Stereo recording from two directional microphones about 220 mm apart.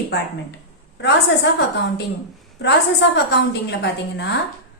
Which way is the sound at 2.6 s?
50° left (ahead or behind).